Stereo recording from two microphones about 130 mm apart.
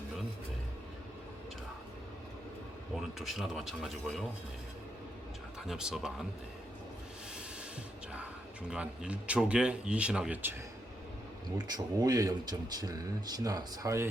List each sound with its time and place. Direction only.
2.9 s speech: centre (ahead or behind)
5.6 s speech: 5° right (ahead or behind)
8.7 s speech: 10° right (ahead or behind)
11.5 s speech: 30° right (ahead or behind)